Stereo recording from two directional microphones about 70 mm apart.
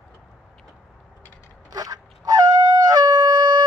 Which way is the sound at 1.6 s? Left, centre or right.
Right.